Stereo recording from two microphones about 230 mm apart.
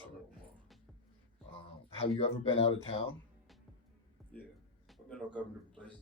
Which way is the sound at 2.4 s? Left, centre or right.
Left.